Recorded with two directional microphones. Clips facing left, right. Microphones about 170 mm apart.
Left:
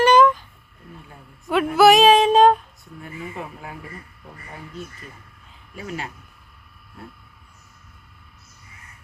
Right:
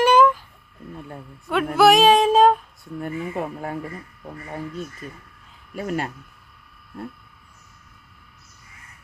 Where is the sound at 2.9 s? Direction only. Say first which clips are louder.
Right 6 dB; 50° right (ahead or behind).